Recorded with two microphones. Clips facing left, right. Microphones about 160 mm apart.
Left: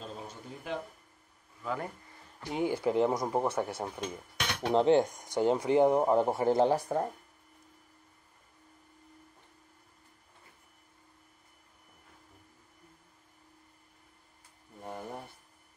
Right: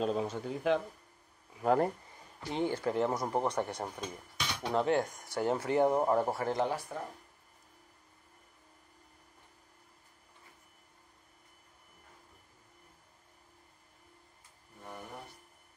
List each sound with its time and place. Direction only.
0.0 s speech: 75° right (ahead or behind)
2.5 s speech: 10° left (ahead or behind)
4.4 s dishes: 65° left (ahead or behind)
4.7 s speech: 25° left (ahead or behind)
6.7 s speech: 45° left (ahead or behind)
14.8 s a sound: 35° left (ahead or behind)